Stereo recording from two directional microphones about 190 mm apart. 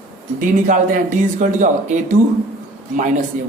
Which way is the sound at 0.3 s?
45° right (ahead or behind).